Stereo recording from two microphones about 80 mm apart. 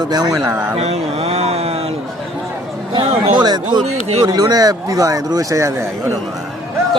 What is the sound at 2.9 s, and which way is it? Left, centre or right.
Speech, right.